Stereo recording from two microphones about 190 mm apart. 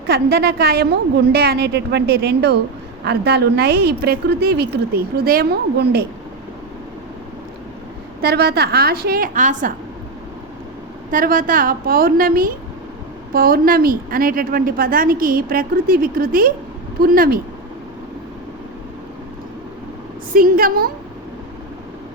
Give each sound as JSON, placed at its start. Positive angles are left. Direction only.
{"t": 0.1, "sound": "a woman's voice", "side_deg": -55}
{"t": 8.2, "sound": "a woman's voice", "side_deg": -55}
{"t": 11.1, "sound": "a woman's voice", "side_deg": -45}
{"t": 20.3, "sound": "a woman's voice", "side_deg": -50}